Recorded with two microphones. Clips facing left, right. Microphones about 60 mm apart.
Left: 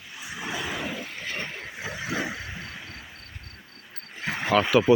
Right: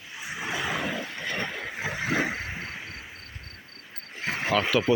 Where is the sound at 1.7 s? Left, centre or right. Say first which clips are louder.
Right 3 dB; right.